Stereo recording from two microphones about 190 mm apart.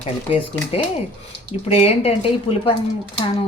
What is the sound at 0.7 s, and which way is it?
A woman's voice, 30° left (ahead or behind).